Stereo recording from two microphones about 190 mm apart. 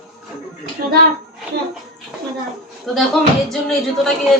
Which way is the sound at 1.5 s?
60° right (ahead or behind).